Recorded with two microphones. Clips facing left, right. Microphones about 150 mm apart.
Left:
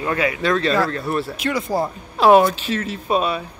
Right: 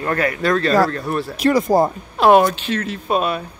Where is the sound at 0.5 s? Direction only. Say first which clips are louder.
Right 3 dB; 40° right (ahead or behind).